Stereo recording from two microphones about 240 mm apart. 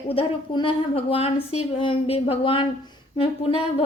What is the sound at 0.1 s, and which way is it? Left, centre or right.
A woman's voice, left.